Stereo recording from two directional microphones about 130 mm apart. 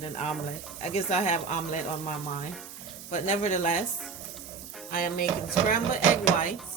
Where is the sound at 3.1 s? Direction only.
70° left (ahead or behind).